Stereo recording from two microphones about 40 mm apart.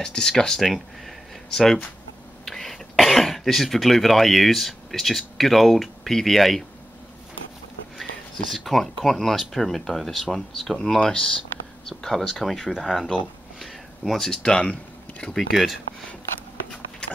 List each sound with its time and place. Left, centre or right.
0.0 s speech: centre
0.6 s speech: centre
8.0 s speech: centre
12.0 s speech: centre
13.1 s a sound: centre
14.4 s speech: left
15.3 s speech: centre